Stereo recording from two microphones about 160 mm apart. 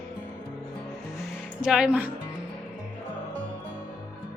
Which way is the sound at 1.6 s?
5° right (ahead or behind).